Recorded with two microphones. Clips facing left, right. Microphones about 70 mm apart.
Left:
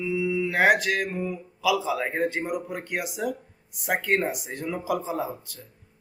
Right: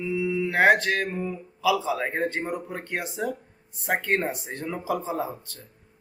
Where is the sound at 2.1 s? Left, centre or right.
Centre.